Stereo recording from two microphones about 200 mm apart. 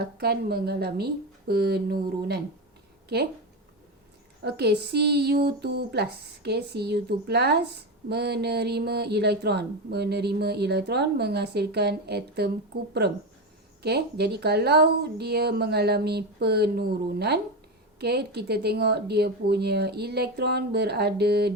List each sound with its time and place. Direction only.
0.0 s speech: 50° right (ahead or behind)
4.4 s speech: 55° right (ahead or behind)
13.8 s speech: 55° right (ahead or behind)